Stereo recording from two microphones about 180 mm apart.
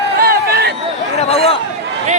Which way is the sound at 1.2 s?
35° left (ahead or behind).